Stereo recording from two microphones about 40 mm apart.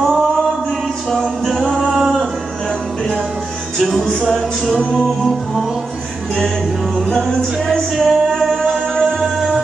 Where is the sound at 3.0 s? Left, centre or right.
Centre.